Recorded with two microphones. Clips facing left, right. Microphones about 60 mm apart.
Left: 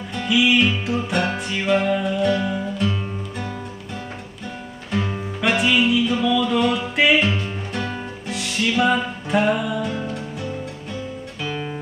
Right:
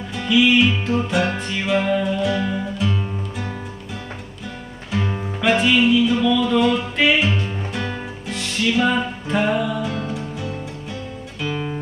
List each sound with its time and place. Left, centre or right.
0.1 s music: centre
4.9 s music: centre
7.4 s music: centre
11.4 s guitar: centre